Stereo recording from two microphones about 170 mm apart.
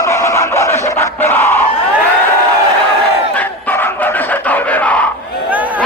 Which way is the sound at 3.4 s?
10° left (ahead or behind).